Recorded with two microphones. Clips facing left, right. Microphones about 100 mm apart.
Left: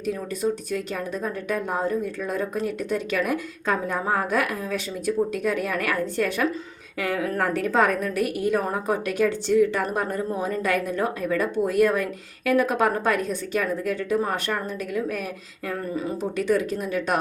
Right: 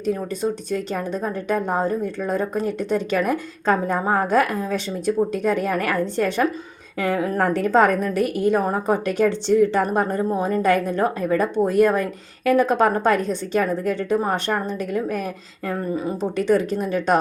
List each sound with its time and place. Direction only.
0.7 s a woman's voice: 35° right (ahead or behind)
16.4 s a woman's voice: 30° right (ahead or behind)